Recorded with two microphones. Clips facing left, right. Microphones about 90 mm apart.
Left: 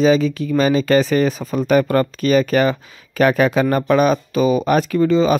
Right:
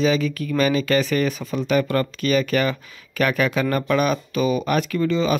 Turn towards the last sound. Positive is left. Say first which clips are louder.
# left 6 dB
turn(degrees=35)  # may be behind; listen again after turning